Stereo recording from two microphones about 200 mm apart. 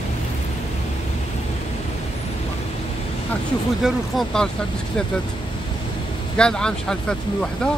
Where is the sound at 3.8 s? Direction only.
Centre (ahead or behind).